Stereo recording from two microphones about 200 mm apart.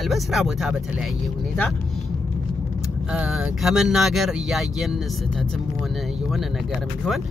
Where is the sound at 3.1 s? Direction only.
5° right (ahead or behind).